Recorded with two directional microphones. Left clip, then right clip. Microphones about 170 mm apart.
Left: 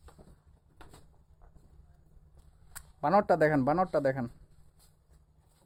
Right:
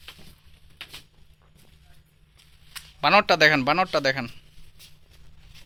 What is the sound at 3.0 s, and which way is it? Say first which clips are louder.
A man's voice: right 7 dB; 5° left (ahead or behind).